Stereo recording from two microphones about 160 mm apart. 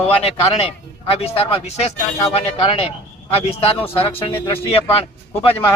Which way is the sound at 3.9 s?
35° left (ahead or behind).